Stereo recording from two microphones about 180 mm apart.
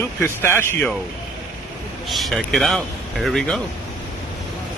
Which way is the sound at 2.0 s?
Centre (ahead or behind).